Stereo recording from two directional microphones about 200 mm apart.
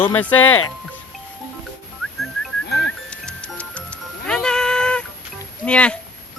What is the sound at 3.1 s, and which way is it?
Music, 5° left (ahead or behind).